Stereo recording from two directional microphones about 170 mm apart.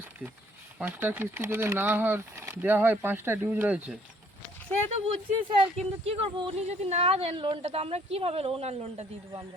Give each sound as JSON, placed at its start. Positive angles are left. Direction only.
{"t": 0.8, "sound": "speech", "side_deg": -10}
{"t": 4.9, "sound": "speech", "side_deg": -35}